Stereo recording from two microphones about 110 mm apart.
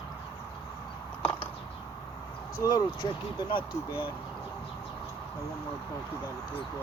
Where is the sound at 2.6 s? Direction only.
40° left (ahead or behind).